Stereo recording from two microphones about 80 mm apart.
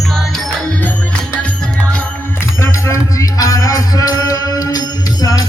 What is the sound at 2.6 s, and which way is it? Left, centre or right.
Music, left.